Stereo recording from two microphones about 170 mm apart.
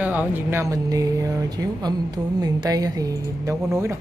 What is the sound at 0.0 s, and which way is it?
Speech, 10° right (ahead or behind).